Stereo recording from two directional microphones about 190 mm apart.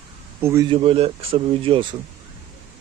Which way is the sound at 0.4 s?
15° right (ahead or behind).